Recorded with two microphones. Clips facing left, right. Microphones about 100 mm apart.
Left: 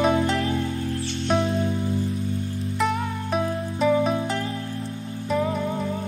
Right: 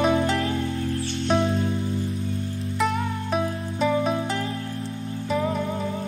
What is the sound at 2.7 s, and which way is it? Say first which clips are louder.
Music: even; centre (ahead or behind).